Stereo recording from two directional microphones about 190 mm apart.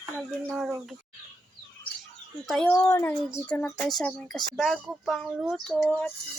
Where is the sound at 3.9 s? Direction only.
5° left (ahead or behind).